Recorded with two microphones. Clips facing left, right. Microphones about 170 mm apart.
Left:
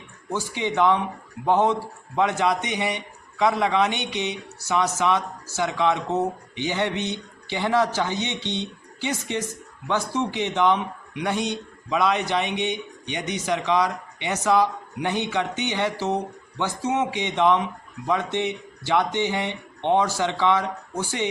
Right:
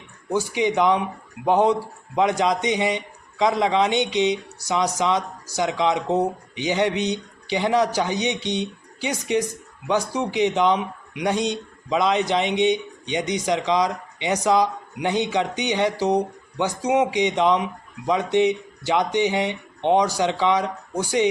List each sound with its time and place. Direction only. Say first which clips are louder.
0.3 s a man's voice: right 3 dB; 15° right (ahead or behind)